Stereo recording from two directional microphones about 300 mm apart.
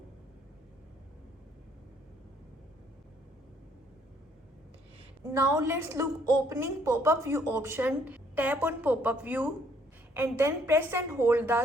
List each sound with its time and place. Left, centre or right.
5.2 s speech: centre